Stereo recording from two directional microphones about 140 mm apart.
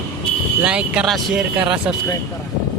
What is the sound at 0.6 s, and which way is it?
Speech, 10° right (ahead or behind).